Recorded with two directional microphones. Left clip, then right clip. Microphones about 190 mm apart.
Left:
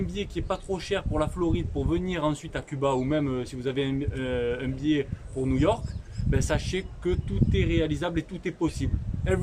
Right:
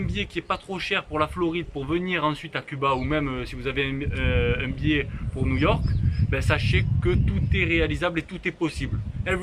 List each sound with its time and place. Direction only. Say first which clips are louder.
0.1 s speech: right 3 dB; 25° left (ahead or behind)